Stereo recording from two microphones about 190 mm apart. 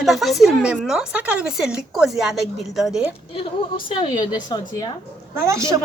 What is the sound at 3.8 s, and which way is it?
A woman's voice, 25° left (ahead or behind).